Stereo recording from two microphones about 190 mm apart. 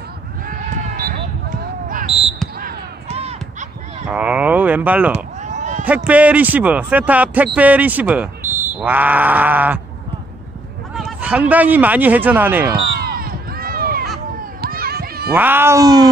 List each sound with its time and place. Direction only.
0.5 s a sound: 50° right (ahead or behind)
2.0 s basketball bounce: 30° right (ahead or behind)
3.1 s crow: 35° right (ahead or behind)
4.1 s speech: 5° right (ahead or behind)
5.1 s run: 40° right (ahead or behind)
6.0 s speech: 10° right (ahead or behind)
11.0 s speech: 5° right (ahead or behind)
13.2 s run: 50° right (ahead or behind)
14.6 s children playing: 55° right (ahead or behind)
15.3 s speech: 10° right (ahead or behind)